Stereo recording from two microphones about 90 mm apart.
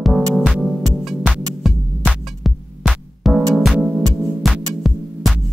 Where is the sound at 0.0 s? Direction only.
Centre (ahead or behind).